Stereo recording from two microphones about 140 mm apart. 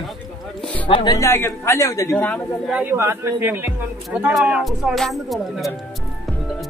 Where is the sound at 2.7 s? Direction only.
15° right (ahead or behind).